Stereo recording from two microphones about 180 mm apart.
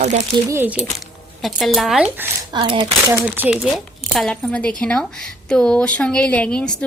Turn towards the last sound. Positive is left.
turn(degrees=5)  # may be behind; listen again after turning